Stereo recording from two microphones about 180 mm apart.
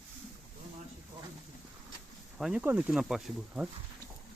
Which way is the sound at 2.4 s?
5° right (ahead or behind).